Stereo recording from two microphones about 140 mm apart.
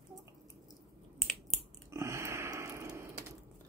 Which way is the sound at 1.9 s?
20° right (ahead or behind).